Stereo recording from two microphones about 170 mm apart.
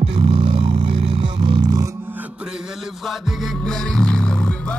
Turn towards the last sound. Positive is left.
turn(degrees=5)  # may be behind; listen again after turning